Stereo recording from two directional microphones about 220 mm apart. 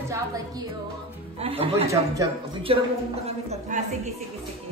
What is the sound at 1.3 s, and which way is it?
Speech, 25° right (ahead or behind).